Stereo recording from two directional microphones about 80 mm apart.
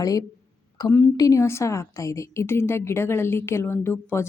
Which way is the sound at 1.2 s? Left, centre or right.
Left.